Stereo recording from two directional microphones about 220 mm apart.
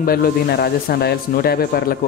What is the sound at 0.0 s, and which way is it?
Speech, 40° left (ahead or behind).